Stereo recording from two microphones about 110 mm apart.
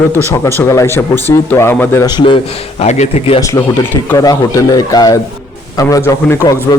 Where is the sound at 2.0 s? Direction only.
45° left (ahead or behind).